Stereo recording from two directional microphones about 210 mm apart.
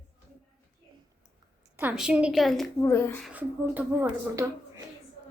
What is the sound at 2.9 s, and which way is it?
Speech, 10° left (ahead or behind).